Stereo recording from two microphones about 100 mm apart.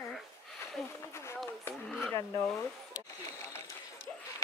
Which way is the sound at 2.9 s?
30° left (ahead or behind).